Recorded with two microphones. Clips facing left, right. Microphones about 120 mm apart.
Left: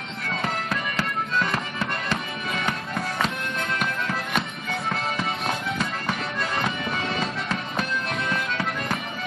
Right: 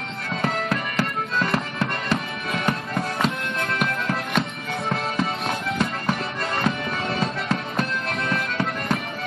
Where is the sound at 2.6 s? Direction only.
25° right (ahead or behind).